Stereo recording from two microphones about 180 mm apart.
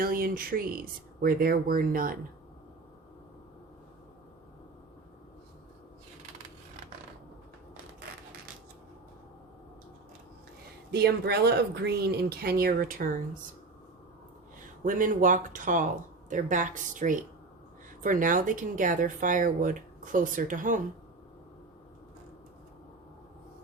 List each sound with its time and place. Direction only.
0.0 s speech: 55° right (ahead or behind)
10.9 s speech: 65° right (ahead or behind)
14.8 s speech: 45° right (ahead or behind)